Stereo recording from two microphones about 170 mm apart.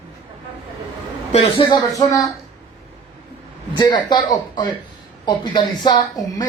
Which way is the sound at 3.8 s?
25° left (ahead or behind).